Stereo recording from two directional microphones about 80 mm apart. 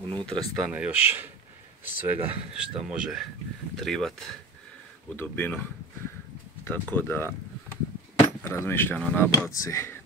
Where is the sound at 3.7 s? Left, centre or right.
Centre.